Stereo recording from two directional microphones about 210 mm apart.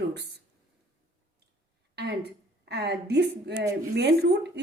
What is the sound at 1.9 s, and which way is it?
A woman's voice, 55° right (ahead or behind).